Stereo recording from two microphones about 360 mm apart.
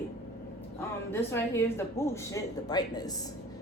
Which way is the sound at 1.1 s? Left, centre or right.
Centre.